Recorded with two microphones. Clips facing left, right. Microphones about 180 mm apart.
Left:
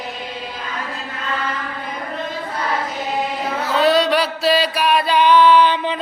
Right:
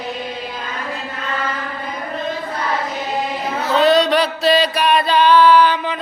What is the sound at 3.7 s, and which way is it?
Music, 5° left (ahead or behind).